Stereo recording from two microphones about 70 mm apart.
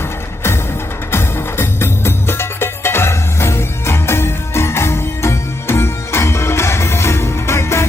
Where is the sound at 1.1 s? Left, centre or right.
Left.